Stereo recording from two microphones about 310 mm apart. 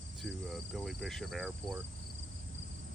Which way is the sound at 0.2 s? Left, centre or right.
Centre.